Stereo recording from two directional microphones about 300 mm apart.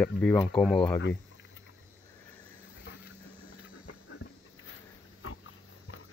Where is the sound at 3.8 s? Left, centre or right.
Left.